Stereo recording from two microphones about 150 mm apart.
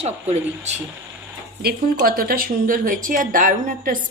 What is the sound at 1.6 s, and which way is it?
A woman's voice, 80° right.